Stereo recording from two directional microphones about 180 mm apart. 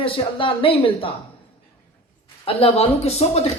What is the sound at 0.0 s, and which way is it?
Speech, 30° left (ahead or behind).